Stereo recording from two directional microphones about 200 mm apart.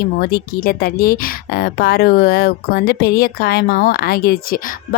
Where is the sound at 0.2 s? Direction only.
50° left (ahead or behind).